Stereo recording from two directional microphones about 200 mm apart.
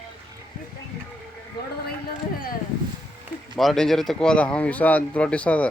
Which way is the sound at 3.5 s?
Centre (ahead or behind).